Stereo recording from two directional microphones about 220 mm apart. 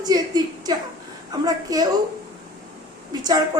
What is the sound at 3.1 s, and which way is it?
Speech, 20° right (ahead or behind).